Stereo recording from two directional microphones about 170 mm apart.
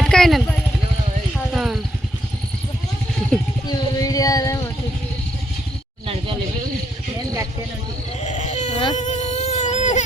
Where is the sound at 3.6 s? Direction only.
20° left (ahead or behind).